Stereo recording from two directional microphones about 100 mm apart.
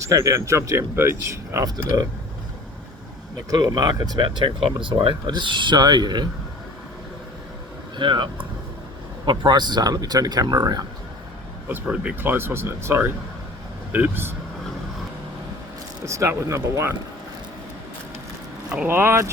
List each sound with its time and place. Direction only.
0.0 s speech: 30° right (ahead or behind)
1.6 s speech: 40° right (ahead or behind)
3.5 s speech: 45° right (ahead or behind)
7.9 s speech: 50° right (ahead or behind)
11.7 s speech: 15° right (ahead or behind)
16.0 s speech: 30° right (ahead or behind)
18.9 s speech: 25° right (ahead or behind)